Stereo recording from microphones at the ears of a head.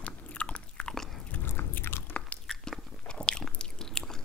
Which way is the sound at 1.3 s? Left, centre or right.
Left.